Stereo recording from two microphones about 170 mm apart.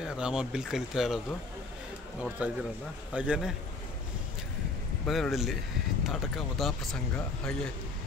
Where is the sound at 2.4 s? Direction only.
10° right (ahead or behind).